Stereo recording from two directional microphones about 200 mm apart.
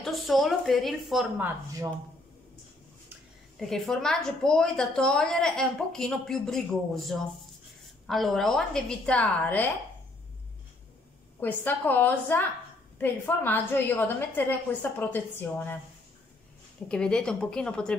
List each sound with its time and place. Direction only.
0.0 s a woman's voice: centre (ahead or behind)
1.4 s speech: 15° right (ahead or behind)
3.5 s a woman's voice: centre (ahead or behind)
11.3 s a woman's voice: 10° left (ahead or behind)
16.9 s a woman's voice: 5° left (ahead or behind)